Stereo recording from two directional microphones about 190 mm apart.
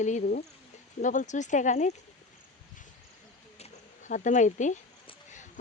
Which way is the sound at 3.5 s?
35° left (ahead or behind).